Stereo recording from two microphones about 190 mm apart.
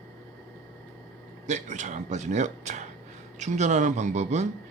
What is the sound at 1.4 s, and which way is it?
Speech, 40° right (ahead or behind).